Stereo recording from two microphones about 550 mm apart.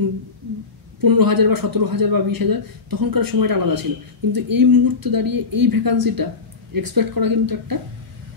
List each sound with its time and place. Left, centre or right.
1.0 s a man's voice: right